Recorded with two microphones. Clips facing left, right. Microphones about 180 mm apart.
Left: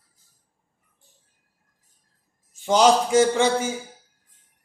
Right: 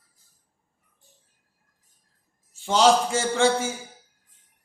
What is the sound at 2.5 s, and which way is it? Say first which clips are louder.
A man's voice: left 2 dB; 15° left (ahead or behind).